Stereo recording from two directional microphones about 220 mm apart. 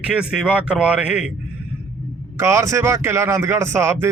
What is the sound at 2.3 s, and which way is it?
A man's voice, 15° right (ahead or behind).